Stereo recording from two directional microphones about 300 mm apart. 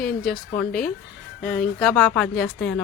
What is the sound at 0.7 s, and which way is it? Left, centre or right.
Speech, left.